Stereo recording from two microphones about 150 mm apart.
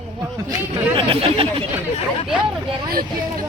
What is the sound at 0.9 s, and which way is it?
Speech, 35° right (ahead or behind).